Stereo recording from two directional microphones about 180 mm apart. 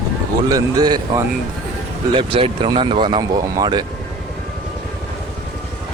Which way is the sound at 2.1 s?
30° right (ahead or behind).